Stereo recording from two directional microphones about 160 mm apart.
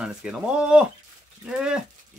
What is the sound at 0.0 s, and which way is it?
Speech, 5° right (ahead or behind).